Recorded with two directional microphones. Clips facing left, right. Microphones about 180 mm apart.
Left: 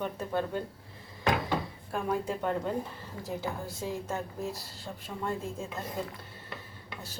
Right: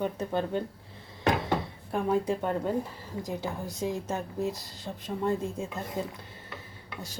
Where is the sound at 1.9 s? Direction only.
15° right (ahead or behind).